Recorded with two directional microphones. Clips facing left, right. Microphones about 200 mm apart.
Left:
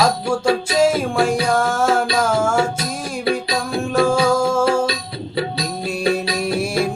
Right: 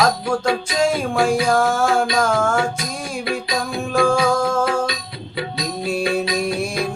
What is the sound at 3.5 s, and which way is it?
Music, centre (ahead or behind).